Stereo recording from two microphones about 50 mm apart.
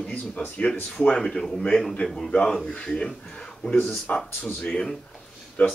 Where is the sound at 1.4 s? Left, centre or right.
Centre.